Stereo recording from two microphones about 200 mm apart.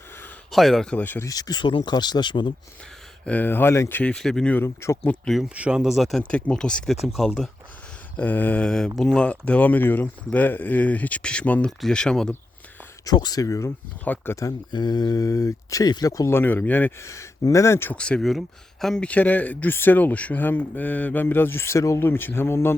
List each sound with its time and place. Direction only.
0.5 s speech: centre (ahead or behind); by 2.5 s 25° left (ahead or behind)
3.2 s speech: 10° left (ahead or behind)
13.1 s speech: 20° left (ahead or behind)